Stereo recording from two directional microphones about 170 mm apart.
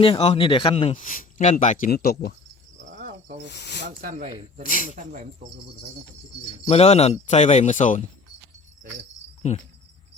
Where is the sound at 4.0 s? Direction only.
55° right (ahead or behind).